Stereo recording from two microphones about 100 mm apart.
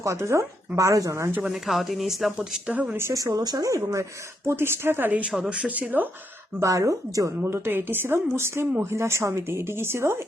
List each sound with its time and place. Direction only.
0.0 s speech: 30° right (ahead or behind)
1.4 s speech: 5° right (ahead or behind)
3.0 s speech: 30° right (ahead or behind); by 6.1 s 15° right (ahead or behind)
6.6 s speech: 30° right (ahead or behind)